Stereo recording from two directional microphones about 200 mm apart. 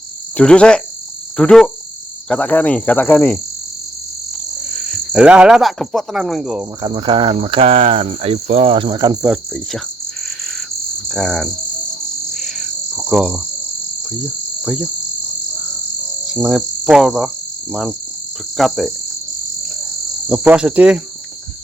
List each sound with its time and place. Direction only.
0.3 s speech: 5° left (ahead or behind)
5.1 s speech: 5° right (ahead or behind)
6.8 s speech: 25° right (ahead or behind)
9.2 s speech: 5° right (ahead or behind)
11.1 s speech: centre (ahead or behind)
12.3 s frog: centre (ahead or behind)
13.1 s cricket: 5° right (ahead or behind)
14.6 s insect: 5° right (ahead or behind)
16.2 s cricket: 5° right (ahead or behind)
18.5 s speech: centre (ahead or behind)
20.2 s speech: 5° right (ahead or behind)